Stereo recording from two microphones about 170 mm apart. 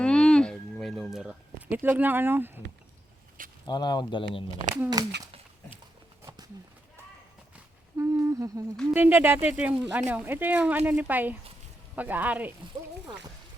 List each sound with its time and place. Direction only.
0.0 s a sound: 5° left (ahead or behind); by 2.5 s 10° right (ahead or behind)
3.7 s speech: 25° left (ahead or behind)
4.7 s speech: 20° right (ahead or behind)
7.5 s humming: 15° right (ahead or behind)
8.9 s speech: 10° right (ahead or behind)